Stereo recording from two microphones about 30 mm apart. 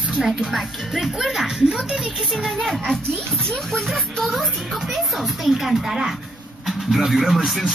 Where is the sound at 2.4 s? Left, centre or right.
Centre.